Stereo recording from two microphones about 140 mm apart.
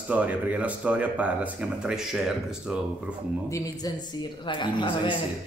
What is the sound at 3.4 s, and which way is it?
Speech, 20° left (ahead or behind).